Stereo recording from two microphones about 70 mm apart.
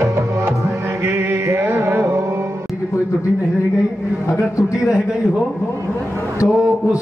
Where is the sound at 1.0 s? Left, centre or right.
Right.